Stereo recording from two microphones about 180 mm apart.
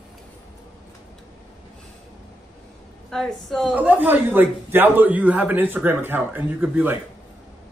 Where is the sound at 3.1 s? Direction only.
Centre (ahead or behind).